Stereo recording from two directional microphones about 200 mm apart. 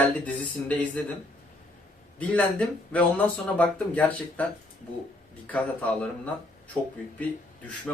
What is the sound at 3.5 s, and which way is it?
Speech, 5° left (ahead or behind).